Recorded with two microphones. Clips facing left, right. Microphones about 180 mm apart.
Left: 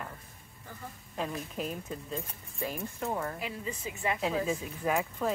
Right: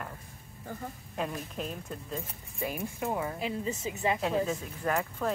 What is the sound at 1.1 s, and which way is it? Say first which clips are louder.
Speech: even; centre (ahead or behind).